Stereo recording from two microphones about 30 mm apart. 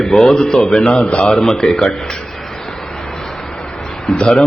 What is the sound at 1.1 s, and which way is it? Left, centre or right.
Speech, left.